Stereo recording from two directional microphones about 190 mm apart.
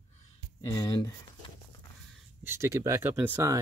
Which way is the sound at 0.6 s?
20° left (ahead or behind).